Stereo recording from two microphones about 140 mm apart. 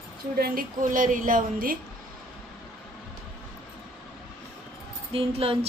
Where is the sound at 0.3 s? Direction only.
90° right.